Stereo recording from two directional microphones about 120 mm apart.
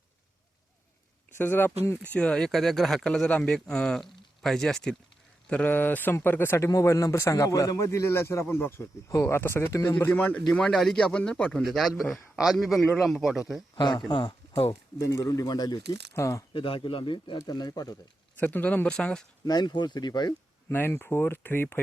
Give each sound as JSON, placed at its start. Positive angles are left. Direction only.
{"t": 1.4, "sound": "a man's voice", "side_deg": 15}
{"t": 13.7, "sound": "speech", "side_deg": 40}
{"t": 14.7, "sound": "a man's voice", "side_deg": 30}
{"t": 16.5, "sound": "speech", "side_deg": 45}
{"t": 18.3, "sound": "speech", "side_deg": 15}
{"t": 19.5, "sound": "speech", "side_deg": 35}
{"t": 20.7, "sound": "a man's voice", "side_deg": 20}